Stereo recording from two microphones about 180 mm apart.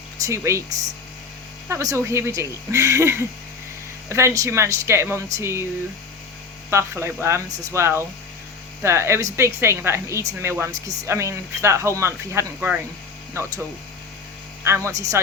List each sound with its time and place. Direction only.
0.3 s a woman's voice: 15° right (ahead or behind)
1.6 s a woman's voice: 15° right (ahead or behind)
6.7 s a woman's voice: 15° right (ahead or behind)
14.6 s speech: 15° right (ahead or behind)